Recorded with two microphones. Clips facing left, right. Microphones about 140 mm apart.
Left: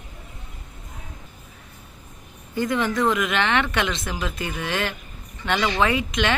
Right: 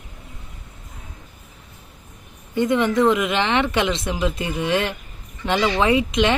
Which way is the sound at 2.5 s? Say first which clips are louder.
Right 5 dB; 25° right (ahead or behind).